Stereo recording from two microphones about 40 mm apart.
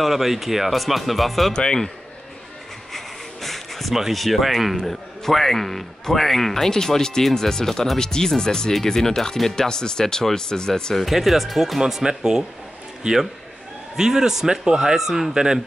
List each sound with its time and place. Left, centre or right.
0.0 s a man's voice: centre
1.5 s speech: centre
3.4 s a sound: centre
3.9 s a man's voice: centre
11.0 s a man's voice: centre
11.8 s a man's voice: centre